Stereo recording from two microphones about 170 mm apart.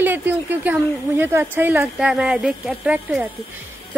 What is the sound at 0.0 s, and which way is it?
A woman's voice, 10° right (ahead or behind).